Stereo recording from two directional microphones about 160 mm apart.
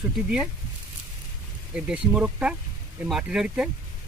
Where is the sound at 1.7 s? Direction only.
5° right (ahead or behind).